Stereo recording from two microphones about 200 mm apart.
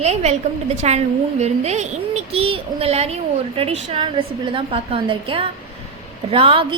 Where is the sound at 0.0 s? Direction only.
35° right (ahead or behind).